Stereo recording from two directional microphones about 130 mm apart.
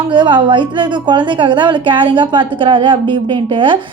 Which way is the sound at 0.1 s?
35° right (ahead or behind).